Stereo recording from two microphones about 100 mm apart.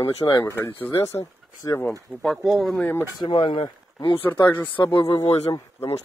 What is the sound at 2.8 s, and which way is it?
Speech, 20° left (ahead or behind).